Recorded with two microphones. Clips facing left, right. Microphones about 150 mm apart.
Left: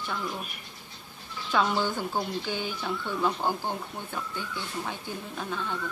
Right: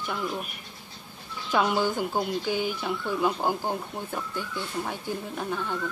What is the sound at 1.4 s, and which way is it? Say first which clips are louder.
Speech: right 2 dB; 10° right (ahead or behind).